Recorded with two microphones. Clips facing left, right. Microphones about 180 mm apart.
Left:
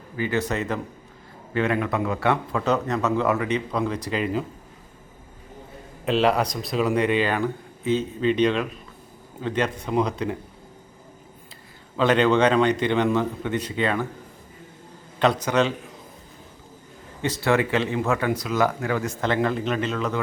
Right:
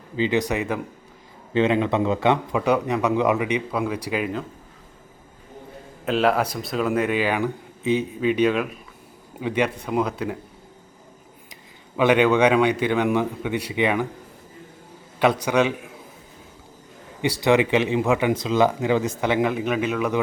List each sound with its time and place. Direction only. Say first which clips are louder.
0.2 s speech: right 3 dB; 15° right (ahead or behind)
6.1 s speech: even; centre (ahead or behind)
11.9 s speech: right 1 dB; 10° right (ahead or behind)
15.2 s speech: right 1 dB; 10° right (ahead or behind)
17.2 s speech: right 3 dB; 15° right (ahead or behind)